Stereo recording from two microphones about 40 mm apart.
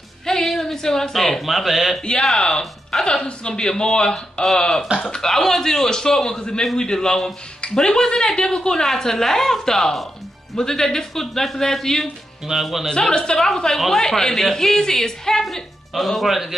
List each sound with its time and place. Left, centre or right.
0.3 s speech: centre
2.3 s a man's voice: centre
2.6 s music: centre
3.1 s a man's voice: left
12.4 s speech: centre
13.1 s a man's voice: centre
15.4 s speech: centre